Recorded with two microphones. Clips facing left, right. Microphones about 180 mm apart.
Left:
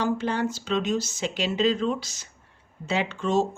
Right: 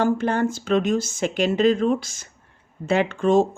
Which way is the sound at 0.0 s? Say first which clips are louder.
Right 5 dB; 50° right (ahead or behind).